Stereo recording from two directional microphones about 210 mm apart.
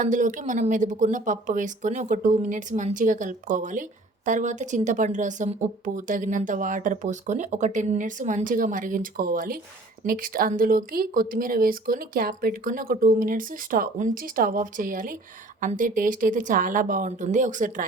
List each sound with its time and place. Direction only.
0.0 s a woman's voice: 40° right (ahead or behind)